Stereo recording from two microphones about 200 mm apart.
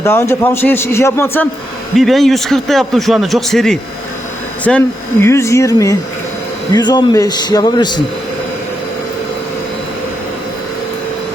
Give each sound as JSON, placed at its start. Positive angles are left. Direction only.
{"t": 0.0, "sound": "a man's voice", "side_deg": 15}
{"t": 2.0, "sound": "a man's voice", "side_deg": 0}